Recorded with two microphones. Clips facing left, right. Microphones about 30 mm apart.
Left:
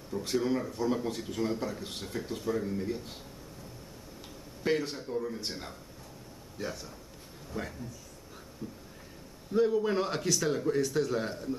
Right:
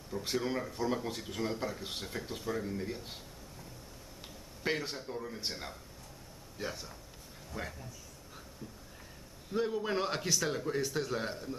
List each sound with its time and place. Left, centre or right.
0.2 s a man's voice: centre
4.6 s a man's voice: centre
9.5 s speech: centre